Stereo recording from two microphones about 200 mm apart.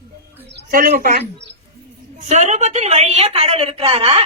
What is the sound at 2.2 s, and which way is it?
A woman's voice, 35° right (ahead or behind).